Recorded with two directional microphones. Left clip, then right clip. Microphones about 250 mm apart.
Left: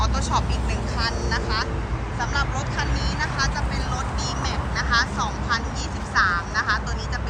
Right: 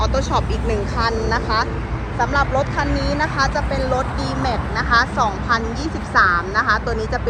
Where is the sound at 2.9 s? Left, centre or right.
Left.